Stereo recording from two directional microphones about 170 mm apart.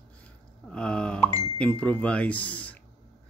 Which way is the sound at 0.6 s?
5° left (ahead or behind).